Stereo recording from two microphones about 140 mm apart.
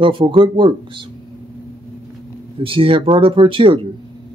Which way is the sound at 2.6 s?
40° right (ahead or behind).